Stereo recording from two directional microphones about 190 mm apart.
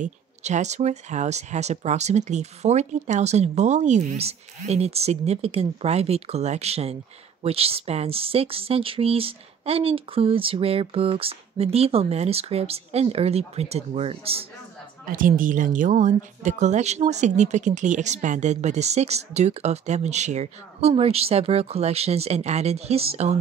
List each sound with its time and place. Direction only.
0.0 s speech: 40° right (ahead or behind)
15.0 s speech: 45° right (ahead or behind)